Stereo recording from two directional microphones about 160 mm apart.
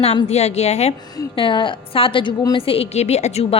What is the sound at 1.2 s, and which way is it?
A woman's voice, 30° left (ahead or behind).